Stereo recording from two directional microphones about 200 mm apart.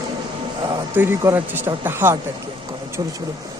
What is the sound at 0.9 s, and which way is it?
Speech, 10° right (ahead or behind).